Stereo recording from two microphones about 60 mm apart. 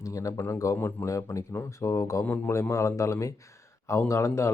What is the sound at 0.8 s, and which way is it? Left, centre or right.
Speech, left.